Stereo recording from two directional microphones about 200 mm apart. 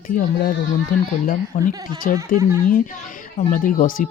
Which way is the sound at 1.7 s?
20° right (ahead or behind).